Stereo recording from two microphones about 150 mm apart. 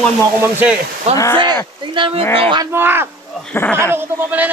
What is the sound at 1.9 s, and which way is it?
Speech, 35° right (ahead or behind).